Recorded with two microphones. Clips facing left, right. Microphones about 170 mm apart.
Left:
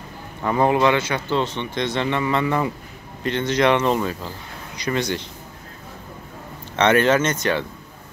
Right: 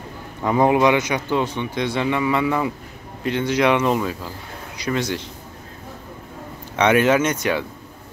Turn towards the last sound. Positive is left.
turn(degrees=-10)  # may be behind; listen again after turning